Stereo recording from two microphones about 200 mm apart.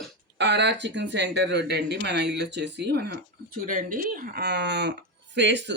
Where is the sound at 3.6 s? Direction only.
40° right (ahead or behind).